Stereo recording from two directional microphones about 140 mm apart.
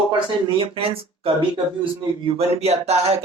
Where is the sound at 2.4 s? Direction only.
50° right (ahead or behind).